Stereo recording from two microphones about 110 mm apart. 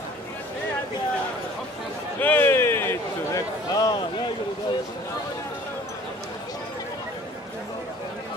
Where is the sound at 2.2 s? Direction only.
15° left (ahead or behind); by 4.0 s 35° left (ahead or behind).